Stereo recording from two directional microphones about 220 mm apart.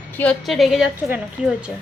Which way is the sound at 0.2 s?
Centre (ahead or behind).